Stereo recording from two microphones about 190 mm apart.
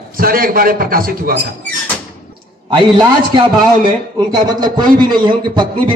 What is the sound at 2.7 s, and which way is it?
A man's voice, 25° right (ahead or behind).